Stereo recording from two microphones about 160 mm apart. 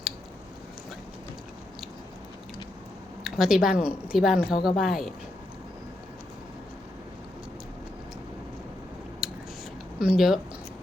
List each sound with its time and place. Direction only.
3.2 s a woman's voice: 5° right (ahead or behind)
9.2 s scissors: centre (ahead or behind)
10.0 s a woman's voice: 5° right (ahead or behind)